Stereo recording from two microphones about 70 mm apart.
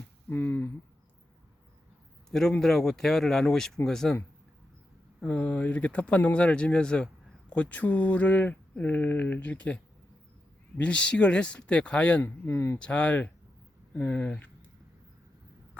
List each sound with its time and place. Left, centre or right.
0.3 s speech: left
2.6 s speech: centre
5.2 s speech: centre
12.2 s speech: left
12.8 s speech: centre